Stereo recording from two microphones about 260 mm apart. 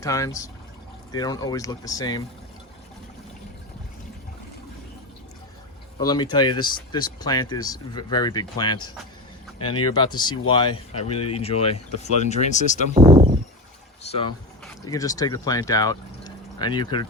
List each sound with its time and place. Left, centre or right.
0.0 s speech: centre
6.0 s speech: centre
12.9 s a sound: right
14.0 s speech: left